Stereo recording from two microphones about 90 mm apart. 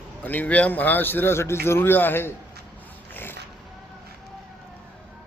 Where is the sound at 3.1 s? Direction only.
25° left (ahead or behind).